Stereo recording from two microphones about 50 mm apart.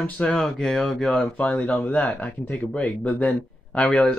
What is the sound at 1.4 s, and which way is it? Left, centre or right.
Speech, left.